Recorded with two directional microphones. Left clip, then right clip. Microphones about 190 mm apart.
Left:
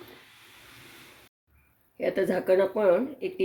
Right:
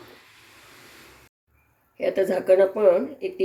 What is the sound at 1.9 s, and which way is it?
Speech, 25° left (ahead or behind).